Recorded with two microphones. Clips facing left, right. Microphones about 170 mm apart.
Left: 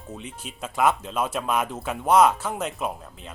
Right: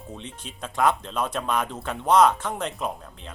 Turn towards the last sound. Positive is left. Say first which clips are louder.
# left 1 dB
turn(degrees=5)  # may be behind; listen again after turning